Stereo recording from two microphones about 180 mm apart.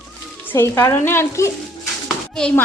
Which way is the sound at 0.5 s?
15° left (ahead or behind).